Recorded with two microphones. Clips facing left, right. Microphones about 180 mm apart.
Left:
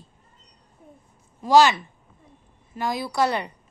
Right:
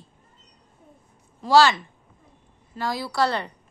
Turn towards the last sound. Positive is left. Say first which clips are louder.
# left 1 dB
turn(degrees=15)  # may be behind; listen again after turning